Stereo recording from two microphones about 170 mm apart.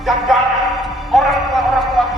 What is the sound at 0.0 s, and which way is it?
Speech, centre (ahead or behind).